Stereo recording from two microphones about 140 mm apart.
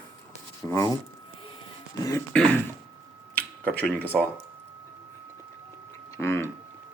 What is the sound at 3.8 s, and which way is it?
Speech, 10° left (ahead or behind).